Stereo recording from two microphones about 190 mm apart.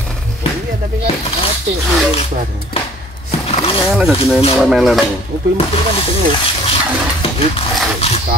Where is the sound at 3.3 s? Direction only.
30° left (ahead or behind).